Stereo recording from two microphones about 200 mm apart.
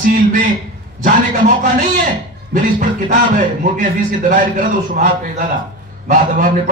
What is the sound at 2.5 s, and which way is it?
Speech, 40° right (ahead or behind).